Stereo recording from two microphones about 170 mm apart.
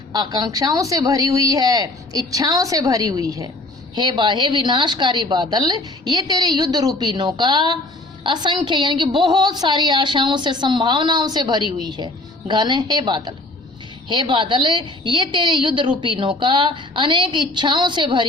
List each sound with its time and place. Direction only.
0.1 s a woman's voice: 25° right (ahead or behind)